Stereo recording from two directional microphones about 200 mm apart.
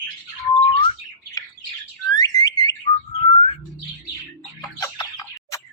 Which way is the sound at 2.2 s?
20° left (ahead or behind).